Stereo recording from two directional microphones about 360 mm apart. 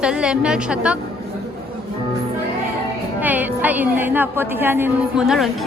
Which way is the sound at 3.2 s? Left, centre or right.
Centre.